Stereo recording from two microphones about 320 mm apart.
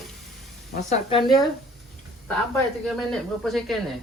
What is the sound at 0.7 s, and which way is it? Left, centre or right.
Speech, left.